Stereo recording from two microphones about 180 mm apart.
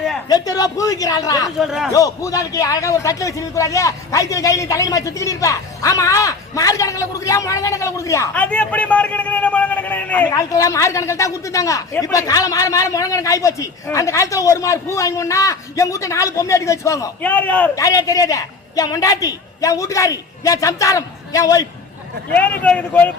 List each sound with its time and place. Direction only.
0.3 s speech: 20° left (ahead or behind)
1.5 s a man's voice: centre (ahead or behind)
1.9 s speech: 20° left (ahead or behind)
10.3 s speech: 20° left (ahead or behind)
22.3 s speech: 10° left (ahead or behind)